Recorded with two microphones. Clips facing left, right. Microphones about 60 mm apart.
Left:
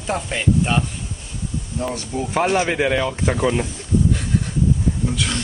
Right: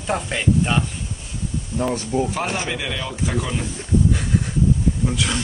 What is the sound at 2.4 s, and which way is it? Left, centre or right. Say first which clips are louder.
Speech: left 7 dB; left.